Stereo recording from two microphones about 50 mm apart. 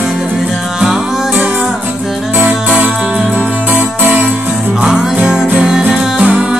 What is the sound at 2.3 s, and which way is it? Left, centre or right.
Music, right.